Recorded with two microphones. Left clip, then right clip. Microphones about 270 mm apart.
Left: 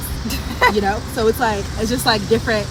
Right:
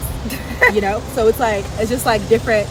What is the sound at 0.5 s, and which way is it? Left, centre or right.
Speech, centre.